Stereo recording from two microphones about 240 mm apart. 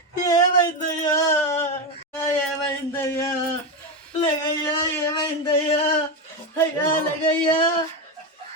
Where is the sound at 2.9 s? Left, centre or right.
Centre.